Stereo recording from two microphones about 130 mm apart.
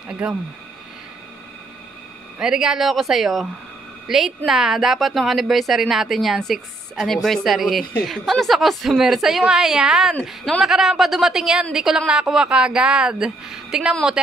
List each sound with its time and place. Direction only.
0.1 s speech: 5° right (ahead or behind)
2.3 s speech: 5° right (ahead or behind)